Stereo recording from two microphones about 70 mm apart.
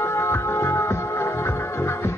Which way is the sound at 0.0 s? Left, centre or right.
Left.